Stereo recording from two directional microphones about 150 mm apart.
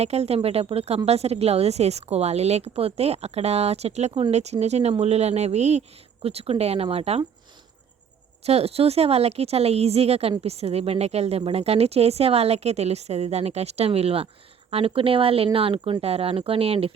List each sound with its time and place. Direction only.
0.0 s a woman's voice: 45° right (ahead or behind)
8.4 s a woman's voice: 40° right (ahead or behind)